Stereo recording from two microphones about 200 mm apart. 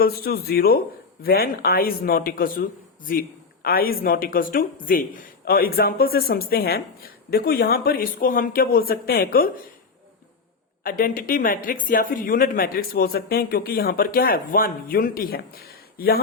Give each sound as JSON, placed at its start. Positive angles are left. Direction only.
{"t": 0.0, "sound": "speech", "side_deg": 50}
{"t": 10.8, "sound": "speech", "side_deg": 45}